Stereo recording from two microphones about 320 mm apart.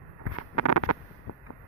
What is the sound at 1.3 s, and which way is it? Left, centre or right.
Vehicle, left.